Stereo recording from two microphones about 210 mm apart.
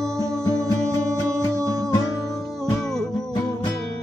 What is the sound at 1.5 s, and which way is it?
Music, 15° right (ahead or behind).